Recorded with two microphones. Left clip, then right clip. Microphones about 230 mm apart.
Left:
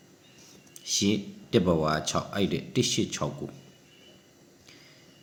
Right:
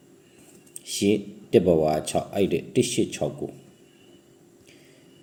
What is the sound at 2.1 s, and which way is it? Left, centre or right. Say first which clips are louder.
Speech: right 5 dB; left.